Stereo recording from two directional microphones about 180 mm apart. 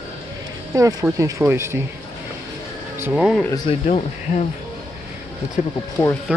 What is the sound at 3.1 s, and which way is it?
Speech, 5° right (ahead or behind).